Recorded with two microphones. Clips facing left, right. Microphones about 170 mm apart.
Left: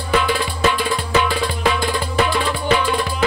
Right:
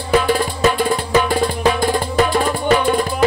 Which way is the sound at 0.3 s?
45° right (ahead or behind).